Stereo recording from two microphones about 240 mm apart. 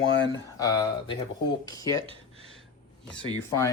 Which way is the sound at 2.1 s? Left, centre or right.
Right.